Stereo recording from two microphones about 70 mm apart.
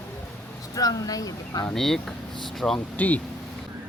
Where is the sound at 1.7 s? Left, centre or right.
Centre.